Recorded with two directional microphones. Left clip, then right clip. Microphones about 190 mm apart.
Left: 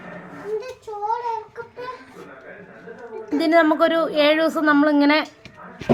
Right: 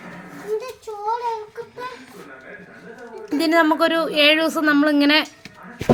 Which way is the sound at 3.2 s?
30° right (ahead or behind).